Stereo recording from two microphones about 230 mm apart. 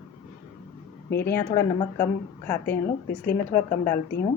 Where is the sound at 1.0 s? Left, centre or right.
Left.